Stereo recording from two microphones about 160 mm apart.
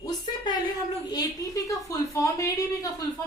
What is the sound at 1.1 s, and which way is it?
A woman's voice, 20° left (ahead or behind).